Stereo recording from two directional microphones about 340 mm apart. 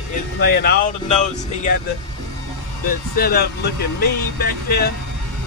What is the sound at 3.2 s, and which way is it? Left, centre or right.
Speech, left.